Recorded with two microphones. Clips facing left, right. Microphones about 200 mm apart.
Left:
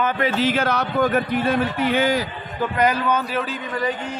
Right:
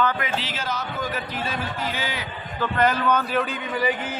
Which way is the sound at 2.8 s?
10° left (ahead or behind).